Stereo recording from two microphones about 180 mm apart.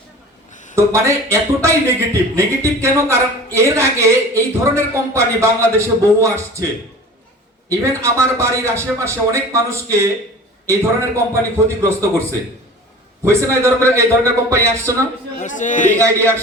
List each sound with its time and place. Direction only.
0.5 s a sound: 45° left (ahead or behind)
0.8 s speech: 15° right (ahead or behind)
7.7 s speech: 15° right (ahead or behind)
13.2 s speech: 15° right (ahead or behind)
15.4 s a man's voice: 45° left (ahead or behind)
16.0 s speech: 15° right (ahead or behind)